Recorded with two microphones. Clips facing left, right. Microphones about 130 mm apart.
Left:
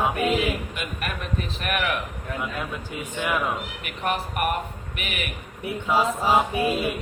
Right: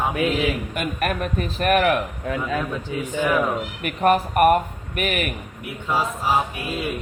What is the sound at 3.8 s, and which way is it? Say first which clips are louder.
A man's voice: right 10 dB; 45° right (ahead or behind).